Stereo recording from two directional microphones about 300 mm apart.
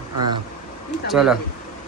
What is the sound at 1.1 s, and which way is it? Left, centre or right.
Speech, centre.